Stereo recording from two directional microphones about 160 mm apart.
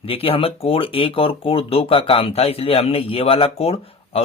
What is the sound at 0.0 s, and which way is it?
Speech, 35° left (ahead or behind).